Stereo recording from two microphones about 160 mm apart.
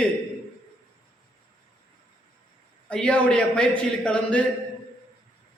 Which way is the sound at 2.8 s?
5° left (ahead or behind).